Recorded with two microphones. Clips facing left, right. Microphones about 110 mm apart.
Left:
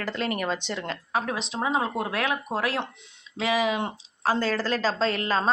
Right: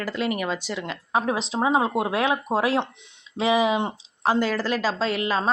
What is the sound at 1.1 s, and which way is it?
Speech, 20° right (ahead or behind).